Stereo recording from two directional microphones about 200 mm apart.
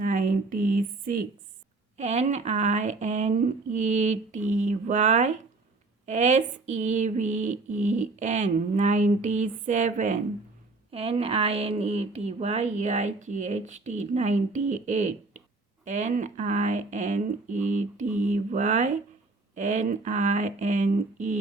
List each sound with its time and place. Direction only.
0.0 s speech: 40° right (ahead or behind)